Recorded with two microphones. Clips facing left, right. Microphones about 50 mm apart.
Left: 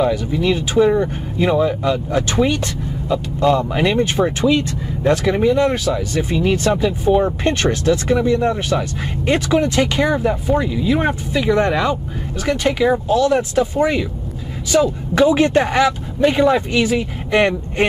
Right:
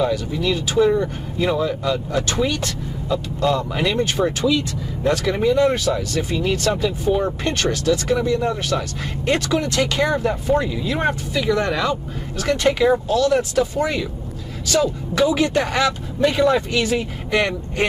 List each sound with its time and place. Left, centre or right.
0.0 s speech: left; by 6.0 s centre
6.1 s speech: left
7.4 s speech: left
8.7 s speech: centre
11.3 s speech: left
12.4 s speech: centre
13.1 s speech: left
15.2 s speech: left; by 17.0 s centre
17.3 s speech: left